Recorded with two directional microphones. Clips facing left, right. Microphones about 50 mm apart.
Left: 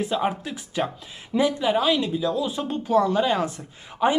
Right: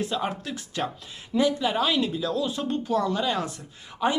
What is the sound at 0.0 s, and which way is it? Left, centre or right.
Speech, centre.